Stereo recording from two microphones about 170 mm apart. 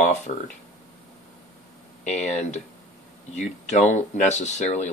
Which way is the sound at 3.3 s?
45° left (ahead or behind).